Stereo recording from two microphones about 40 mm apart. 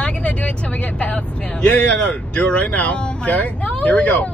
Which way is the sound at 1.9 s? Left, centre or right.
Left.